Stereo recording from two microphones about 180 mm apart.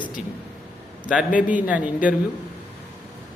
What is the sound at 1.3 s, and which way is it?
Speech, 45° left (ahead or behind).